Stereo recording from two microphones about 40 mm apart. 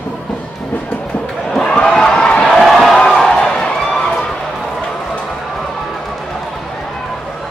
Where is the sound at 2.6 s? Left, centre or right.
Centre.